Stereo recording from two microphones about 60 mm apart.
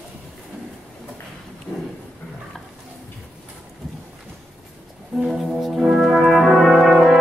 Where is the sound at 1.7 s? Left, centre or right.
Left.